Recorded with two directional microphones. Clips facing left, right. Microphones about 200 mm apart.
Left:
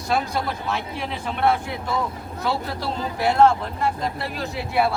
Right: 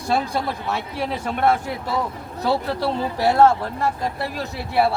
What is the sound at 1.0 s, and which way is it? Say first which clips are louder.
Speech: right 3 dB; 45° right (ahead or behind).